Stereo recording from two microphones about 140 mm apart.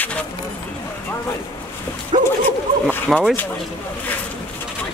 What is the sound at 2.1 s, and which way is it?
Speech, 35° right (ahead or behind).